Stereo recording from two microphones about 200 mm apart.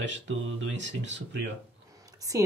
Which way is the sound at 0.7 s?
65° right (ahead or behind).